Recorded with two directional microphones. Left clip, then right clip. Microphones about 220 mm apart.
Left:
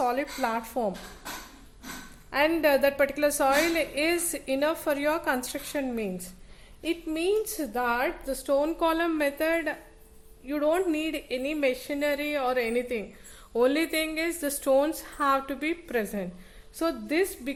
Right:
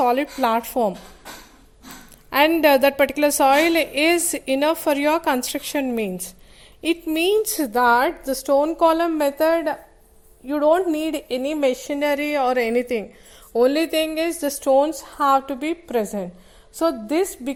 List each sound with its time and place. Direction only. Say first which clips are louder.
0.0 s a woman's voice: right 8 dB; 35° right (ahead or behind)
2.3 s a woman's voice: right 8 dB; 35° right (ahead or behind); by 17.5 s 20° right (ahead or behind)